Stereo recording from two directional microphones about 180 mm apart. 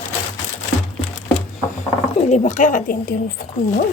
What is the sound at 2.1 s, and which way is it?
Speech, 40° left (ahead or behind).